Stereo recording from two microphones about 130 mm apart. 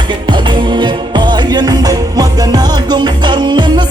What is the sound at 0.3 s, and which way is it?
Music, 35° right (ahead or behind).